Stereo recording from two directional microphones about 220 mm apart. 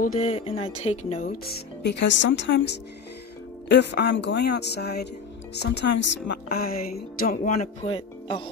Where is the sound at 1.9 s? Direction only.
55° left (ahead or behind).